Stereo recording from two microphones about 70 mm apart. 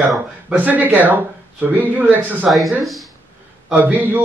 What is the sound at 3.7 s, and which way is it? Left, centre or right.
Speech, right.